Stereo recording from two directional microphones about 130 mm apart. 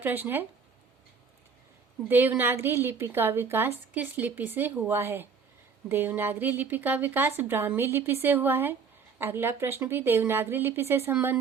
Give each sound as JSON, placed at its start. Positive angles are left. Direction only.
{"t": 0.0, "sound": "a woman's voice", "side_deg": -15}
{"t": 2.0, "sound": "a woman's voice", "side_deg": -15}